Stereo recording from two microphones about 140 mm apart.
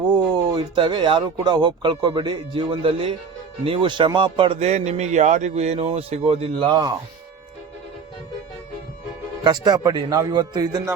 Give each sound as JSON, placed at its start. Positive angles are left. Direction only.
{"t": 0.1, "sound": "speech", "side_deg": -30}
{"t": 9.4, "sound": "a man's voice", "side_deg": -30}